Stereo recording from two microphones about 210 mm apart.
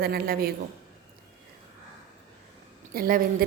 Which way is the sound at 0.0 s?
45° right (ahead or behind).